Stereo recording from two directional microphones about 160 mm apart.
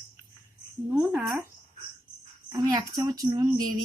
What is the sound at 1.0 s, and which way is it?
Speech, 5° right (ahead or behind).